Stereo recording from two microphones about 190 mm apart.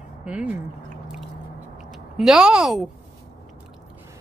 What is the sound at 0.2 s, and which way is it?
Speech, 5° right (ahead or behind).